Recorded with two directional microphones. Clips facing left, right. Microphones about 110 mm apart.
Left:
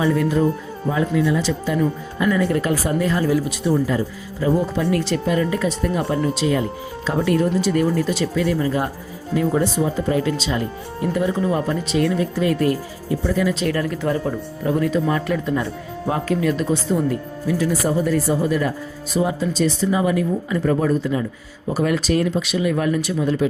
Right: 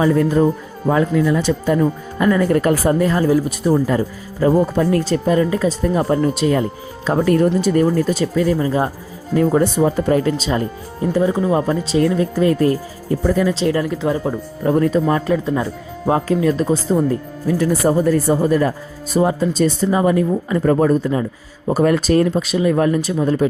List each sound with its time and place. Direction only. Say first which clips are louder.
0.0 s speech: right 4 dB; 40° right (ahead or behind)
0.9 s speech: right 4 dB; 50° right (ahead or behind); by 8.9 s 30° right (ahead or behind)
9.3 s speech: right 4 dB; 45° right (ahead or behind)
11.0 s speech: right 4 dB; 30° right (ahead or behind)
13.5 s speech: right 4 dB; 25° right (ahead or behind)
14.6 s speech: right 4 dB; 40° right (ahead or behind)